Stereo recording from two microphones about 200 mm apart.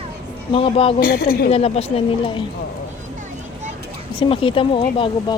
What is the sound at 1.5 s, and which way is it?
Speech, 30° left (ahead or behind).